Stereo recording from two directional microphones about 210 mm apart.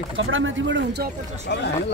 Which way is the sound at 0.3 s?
65° right (ahead or behind).